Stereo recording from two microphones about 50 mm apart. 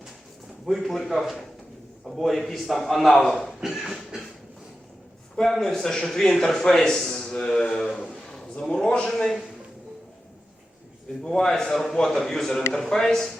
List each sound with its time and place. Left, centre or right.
0.6 s a man's voice: centre
3.6 s a sound: centre
5.4 s speech: centre
7.9 s a sound: centre
8.6 s speech: centre
11.2 s speech: centre